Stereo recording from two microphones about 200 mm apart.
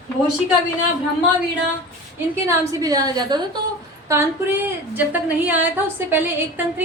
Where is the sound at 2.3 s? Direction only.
15° right (ahead or behind).